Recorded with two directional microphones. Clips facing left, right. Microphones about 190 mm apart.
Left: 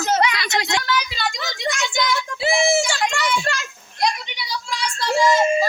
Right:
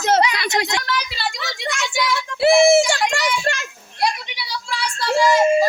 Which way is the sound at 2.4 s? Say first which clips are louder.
Right 7 dB; 60° right (ahead or behind).